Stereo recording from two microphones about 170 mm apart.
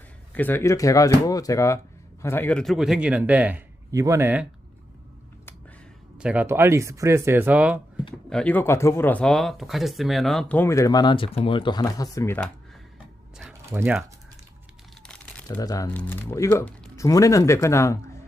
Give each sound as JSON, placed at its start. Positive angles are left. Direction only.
{"t": 0.3, "sound": "a man's voice", "side_deg": 10}
{"t": 6.1, "sound": "a man's voice", "side_deg": -5}
{"t": 8.3, "sound": "speech", "side_deg": 5}
{"t": 13.5, "sound": "a sound", "side_deg": -15}
{"t": 15.0, "sound": "crumpling", "side_deg": 5}
{"t": 15.4, "sound": "speech", "side_deg": 20}
{"t": 15.9, "sound": "speech", "side_deg": 10}